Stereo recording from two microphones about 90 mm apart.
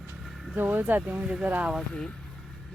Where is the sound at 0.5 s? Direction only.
20° right (ahead or behind).